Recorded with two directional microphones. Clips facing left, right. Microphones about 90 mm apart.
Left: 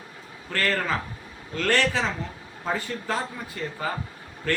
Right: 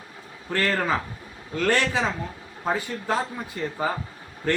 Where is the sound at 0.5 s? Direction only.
20° right (ahead or behind).